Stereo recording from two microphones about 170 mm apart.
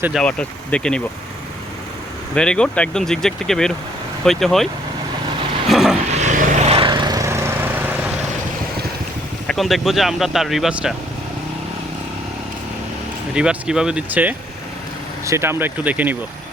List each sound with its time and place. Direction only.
0.2 s speech: 5° left (ahead or behind)
2.3 s speech: 5° left (ahead or behind)
5.6 s vehicle: centre (ahead or behind)
6.1 s vehicle: 45° right (ahead or behind); by 8.1 s 10° right (ahead or behind)
9.5 s speech: centre (ahead or behind)
13.3 s speech: 5° right (ahead or behind)